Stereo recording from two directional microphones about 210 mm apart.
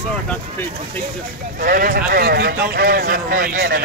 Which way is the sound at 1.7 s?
40° right (ahead or behind).